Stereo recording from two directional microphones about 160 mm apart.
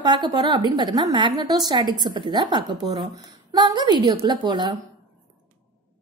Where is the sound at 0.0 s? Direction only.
25° right (ahead or behind).